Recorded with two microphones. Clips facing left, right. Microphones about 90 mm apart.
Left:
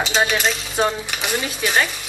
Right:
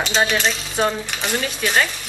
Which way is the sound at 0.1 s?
15° left (ahead or behind).